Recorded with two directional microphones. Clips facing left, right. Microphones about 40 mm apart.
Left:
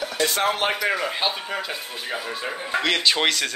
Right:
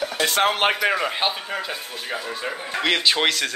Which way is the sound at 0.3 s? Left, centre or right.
Right.